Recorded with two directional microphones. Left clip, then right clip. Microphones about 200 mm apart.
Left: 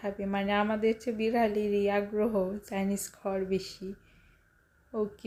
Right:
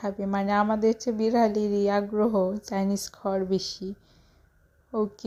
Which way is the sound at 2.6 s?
10° right (ahead or behind).